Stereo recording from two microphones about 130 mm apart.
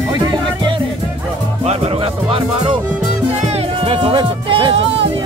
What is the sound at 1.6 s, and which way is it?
Music, 50° right (ahead or behind).